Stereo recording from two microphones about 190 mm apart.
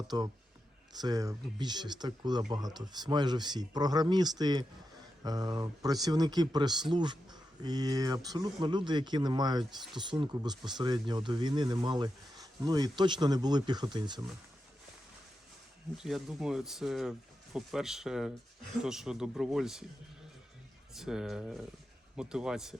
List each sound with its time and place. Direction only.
0.1 s speech: 20° right (ahead or behind)
16.0 s speech: centre (ahead or behind)
20.9 s speech: 5° right (ahead or behind)